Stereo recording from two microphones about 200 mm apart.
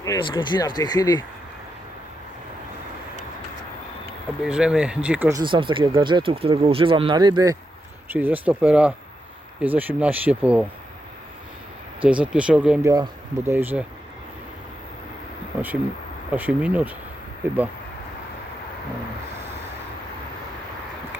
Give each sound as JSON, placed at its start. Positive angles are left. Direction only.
{"t": 0.0, "sound": "speech", "side_deg": 20}
{"t": 4.4, "sound": "speech", "side_deg": -5}
{"t": 5.3, "sound": "speech", "side_deg": -25}
{"t": 8.1, "sound": "speech", "side_deg": -10}
{"t": 12.0, "sound": "speech", "side_deg": -5}
{"t": 12.8, "sound": "speech", "side_deg": -20}
{"t": 16.3, "sound": "speech", "side_deg": -5}